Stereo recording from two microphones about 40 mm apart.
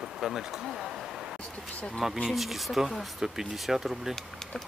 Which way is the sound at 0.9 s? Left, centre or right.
Centre.